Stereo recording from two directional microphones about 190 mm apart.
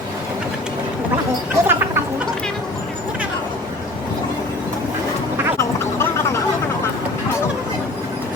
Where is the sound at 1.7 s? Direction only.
10° right (ahead or behind).